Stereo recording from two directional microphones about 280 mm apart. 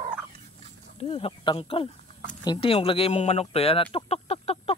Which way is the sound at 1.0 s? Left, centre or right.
Left.